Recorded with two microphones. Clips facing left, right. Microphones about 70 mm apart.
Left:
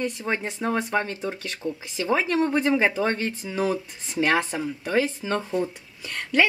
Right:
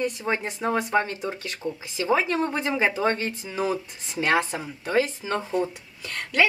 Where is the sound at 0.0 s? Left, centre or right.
Centre.